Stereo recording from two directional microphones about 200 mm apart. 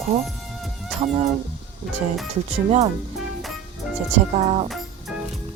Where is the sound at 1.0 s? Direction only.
35° right (ahead or behind).